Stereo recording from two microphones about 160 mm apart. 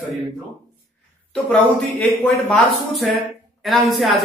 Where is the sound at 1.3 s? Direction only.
10° left (ahead or behind).